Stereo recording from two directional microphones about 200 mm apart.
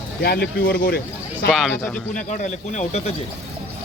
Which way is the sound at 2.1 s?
40° left (ahead or behind).